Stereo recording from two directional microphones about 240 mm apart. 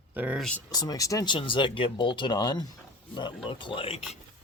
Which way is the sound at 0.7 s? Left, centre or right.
Centre.